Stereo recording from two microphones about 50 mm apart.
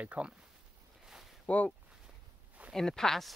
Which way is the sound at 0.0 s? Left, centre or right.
Right.